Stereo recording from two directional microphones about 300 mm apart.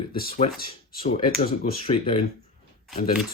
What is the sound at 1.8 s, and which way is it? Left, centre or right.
Speech, centre.